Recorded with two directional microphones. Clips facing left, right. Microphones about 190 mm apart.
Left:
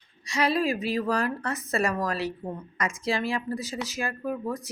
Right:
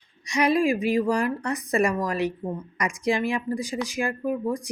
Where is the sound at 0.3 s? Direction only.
15° right (ahead or behind).